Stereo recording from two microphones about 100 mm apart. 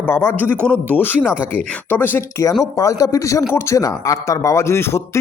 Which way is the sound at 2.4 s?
35° left (ahead or behind).